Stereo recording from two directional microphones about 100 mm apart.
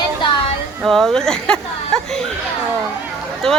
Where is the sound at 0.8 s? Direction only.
Centre (ahead or behind).